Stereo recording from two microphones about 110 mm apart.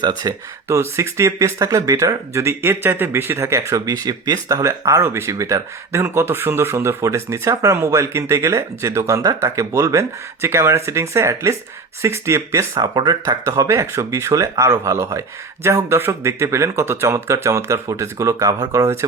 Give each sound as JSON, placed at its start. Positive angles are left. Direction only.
{"t": 0.2, "sound": "speech", "side_deg": -35}
{"t": 0.8, "sound": "speech", "side_deg": -25}